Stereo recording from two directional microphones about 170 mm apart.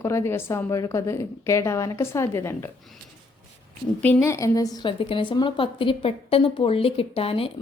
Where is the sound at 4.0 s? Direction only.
15° left (ahead or behind).